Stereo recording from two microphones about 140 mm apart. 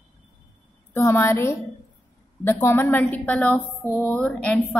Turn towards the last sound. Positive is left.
turn(degrees=10)  # may be behind; listen again after turning